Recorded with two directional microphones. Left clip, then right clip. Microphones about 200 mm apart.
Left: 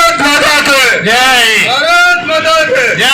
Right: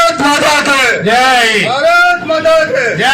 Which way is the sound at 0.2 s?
65° right (ahead or behind).